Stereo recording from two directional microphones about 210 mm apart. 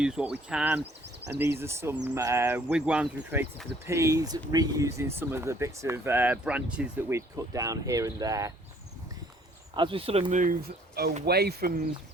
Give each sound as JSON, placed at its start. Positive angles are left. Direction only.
{"t": 0.0, "sound": "speech", "side_deg": -5}
{"t": 9.7, "sound": "speech", "side_deg": -25}